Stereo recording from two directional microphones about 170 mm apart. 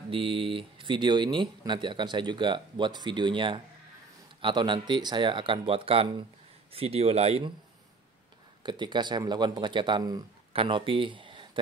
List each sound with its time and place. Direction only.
0.1 s speech: 30° right (ahead or behind)
8.6 s speech: 25° right (ahead or behind)